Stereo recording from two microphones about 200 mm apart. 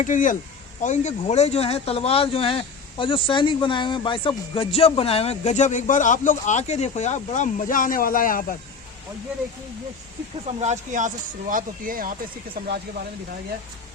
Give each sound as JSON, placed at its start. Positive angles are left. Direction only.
{"t": 0.0, "sound": "speech", "side_deg": 40}
{"t": 10.6, "sound": "speech", "side_deg": -35}